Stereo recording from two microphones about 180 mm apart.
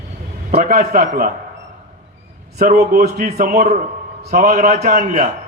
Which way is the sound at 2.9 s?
55° right (ahead or behind).